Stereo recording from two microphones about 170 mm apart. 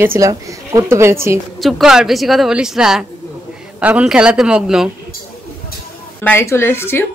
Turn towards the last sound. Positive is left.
turn(degrees=15)  # may be behind; listen again after turning